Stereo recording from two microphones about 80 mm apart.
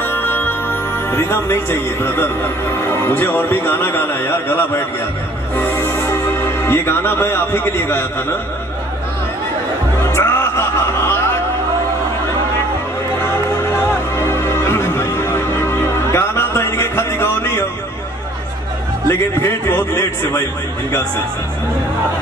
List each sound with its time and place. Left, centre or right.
0.0 s music: left
1.1 s a man's voice: left
10.1 s music: left
14.1 s music: left
19.0 s a man's voice: left